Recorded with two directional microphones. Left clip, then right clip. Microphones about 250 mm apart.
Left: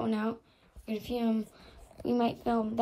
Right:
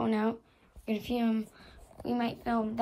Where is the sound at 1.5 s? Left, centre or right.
Centre.